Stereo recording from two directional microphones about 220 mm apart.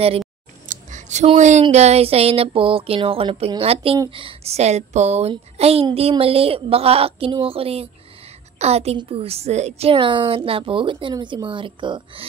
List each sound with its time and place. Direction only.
0.7 s a woman's voice: 35° right (ahead or behind)